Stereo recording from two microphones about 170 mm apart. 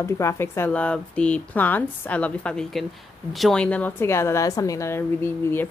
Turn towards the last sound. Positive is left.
turn(degrees=15)  # may be behind; listen again after turning